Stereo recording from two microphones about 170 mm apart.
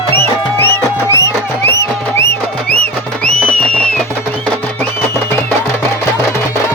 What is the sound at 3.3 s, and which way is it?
Music, 5° left (ahead or behind).